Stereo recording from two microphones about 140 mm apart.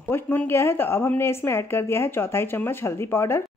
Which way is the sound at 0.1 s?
15° left (ahead or behind).